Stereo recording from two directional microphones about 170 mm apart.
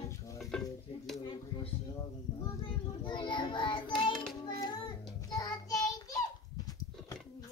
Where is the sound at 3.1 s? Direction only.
25° left (ahead or behind).